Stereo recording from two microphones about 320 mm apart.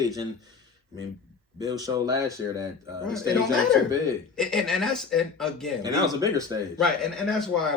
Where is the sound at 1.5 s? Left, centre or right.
Centre.